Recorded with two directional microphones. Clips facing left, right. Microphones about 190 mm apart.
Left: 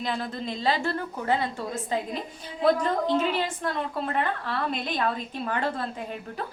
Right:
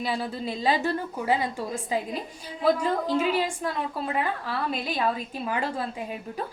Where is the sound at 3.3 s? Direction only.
10° right (ahead or behind).